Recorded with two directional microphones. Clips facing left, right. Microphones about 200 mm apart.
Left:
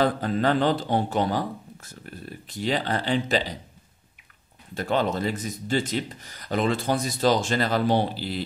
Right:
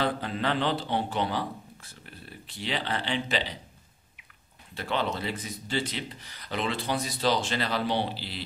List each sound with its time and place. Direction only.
0.0 s a man's voice: 45° left (ahead or behind)
4.7 s speech: 45° left (ahead or behind)